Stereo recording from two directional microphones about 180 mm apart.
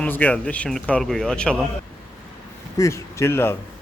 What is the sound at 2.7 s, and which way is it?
Speech, 15° left (ahead or behind).